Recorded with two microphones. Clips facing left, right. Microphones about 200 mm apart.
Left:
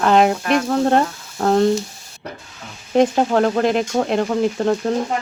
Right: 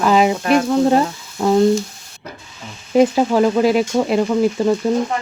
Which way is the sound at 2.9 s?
5° right (ahead or behind).